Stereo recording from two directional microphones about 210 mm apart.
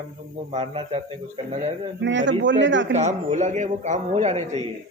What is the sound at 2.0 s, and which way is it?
Speech, 60° right (ahead or behind).